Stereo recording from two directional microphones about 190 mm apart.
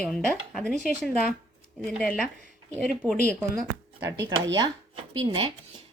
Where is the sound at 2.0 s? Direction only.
5° left (ahead or behind).